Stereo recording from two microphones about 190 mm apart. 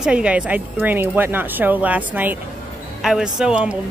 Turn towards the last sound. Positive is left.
turn(degrees=-5)  # may be behind; listen again after turning